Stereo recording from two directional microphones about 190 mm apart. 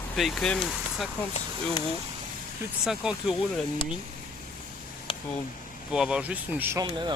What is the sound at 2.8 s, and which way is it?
Speech, 5° right (ahead or behind).